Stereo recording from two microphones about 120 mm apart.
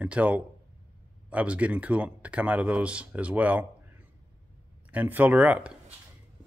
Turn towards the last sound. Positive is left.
turn(degrees=-10)  # may be behind; listen again after turning